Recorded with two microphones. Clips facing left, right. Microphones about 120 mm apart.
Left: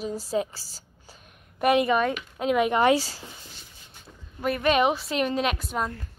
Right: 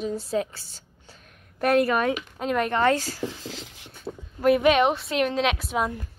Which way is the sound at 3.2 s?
90° right.